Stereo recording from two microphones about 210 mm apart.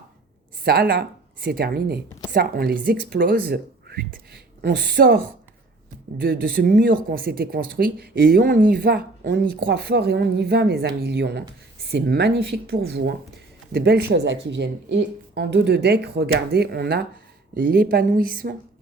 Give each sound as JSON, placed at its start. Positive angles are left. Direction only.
{"t": 0.6, "sound": "a woman's voice", "side_deg": -45}